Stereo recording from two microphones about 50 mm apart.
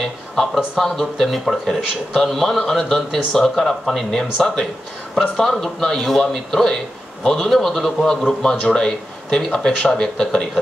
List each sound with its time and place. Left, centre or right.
0.7 s speech: centre